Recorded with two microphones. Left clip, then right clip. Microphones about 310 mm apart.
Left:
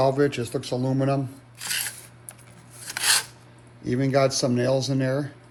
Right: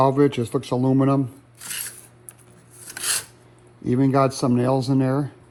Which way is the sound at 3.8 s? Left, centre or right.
Centre.